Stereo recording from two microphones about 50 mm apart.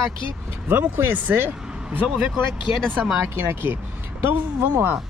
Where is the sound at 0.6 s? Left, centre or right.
Right.